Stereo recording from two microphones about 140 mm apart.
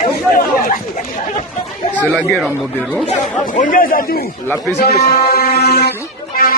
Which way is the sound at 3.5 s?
90° left.